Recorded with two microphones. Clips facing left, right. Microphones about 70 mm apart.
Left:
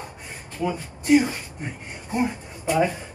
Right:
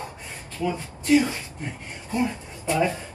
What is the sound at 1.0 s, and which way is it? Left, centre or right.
Speech, centre.